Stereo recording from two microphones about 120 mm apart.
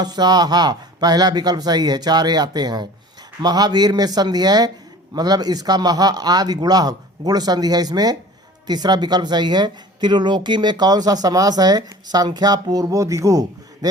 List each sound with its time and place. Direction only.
0.0 s speech: 35° right (ahead or behind)